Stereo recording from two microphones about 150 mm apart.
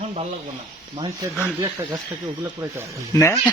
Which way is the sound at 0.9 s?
35° right (ahead or behind).